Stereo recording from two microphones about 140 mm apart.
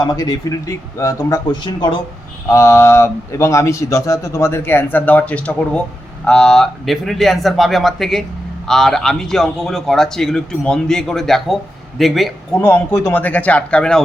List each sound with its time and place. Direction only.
0.0 s a man's voice: 30° left (ahead or behind)
1.5 s speech: 35° left (ahead or behind)
2.5 s a man's voice: 20° left (ahead or behind); by 12.3 s centre (ahead or behind)
12.5 s speech: 10° left (ahead or behind)